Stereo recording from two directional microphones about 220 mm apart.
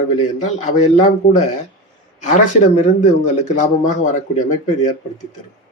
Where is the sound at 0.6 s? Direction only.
30° left (ahead or behind).